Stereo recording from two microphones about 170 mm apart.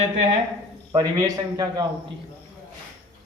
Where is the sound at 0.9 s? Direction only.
20° right (ahead or behind).